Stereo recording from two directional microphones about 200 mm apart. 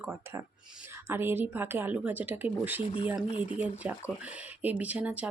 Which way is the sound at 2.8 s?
25° left (ahead or behind).